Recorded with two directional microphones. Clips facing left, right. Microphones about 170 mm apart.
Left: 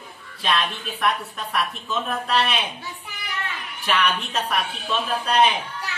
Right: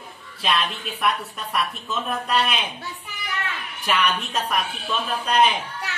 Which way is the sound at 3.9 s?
Centre (ahead or behind).